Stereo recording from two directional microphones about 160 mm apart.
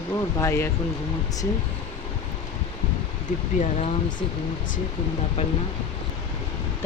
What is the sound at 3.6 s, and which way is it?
Speech, 45° left (ahead or behind).